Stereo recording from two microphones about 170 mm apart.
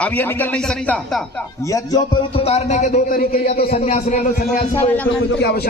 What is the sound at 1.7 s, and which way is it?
Speech, 25° left (ahead or behind).